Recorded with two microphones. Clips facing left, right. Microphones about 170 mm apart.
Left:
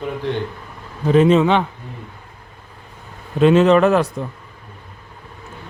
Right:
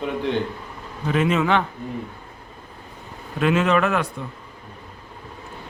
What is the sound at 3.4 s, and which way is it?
Speech, 30° left (ahead or behind).